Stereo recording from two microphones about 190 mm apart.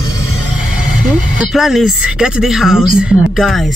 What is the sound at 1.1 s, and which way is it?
Speech, 5° right (ahead or behind).